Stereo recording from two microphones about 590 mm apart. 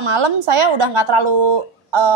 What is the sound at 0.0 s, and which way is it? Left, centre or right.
A woman's voice, right.